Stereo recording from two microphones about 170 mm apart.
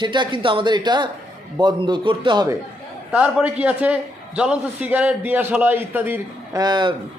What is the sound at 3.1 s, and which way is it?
A man's voice, 5° right (ahead or behind).